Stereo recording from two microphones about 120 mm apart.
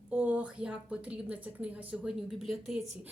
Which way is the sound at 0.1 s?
10° right (ahead or behind).